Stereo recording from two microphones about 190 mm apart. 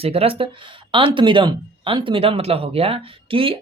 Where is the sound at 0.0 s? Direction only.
30° right (ahead or behind).